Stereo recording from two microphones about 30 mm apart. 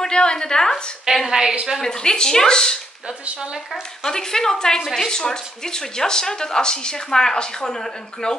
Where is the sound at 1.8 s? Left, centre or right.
Left.